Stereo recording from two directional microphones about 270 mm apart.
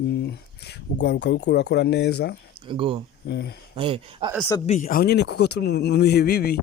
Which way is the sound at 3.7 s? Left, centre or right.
Centre.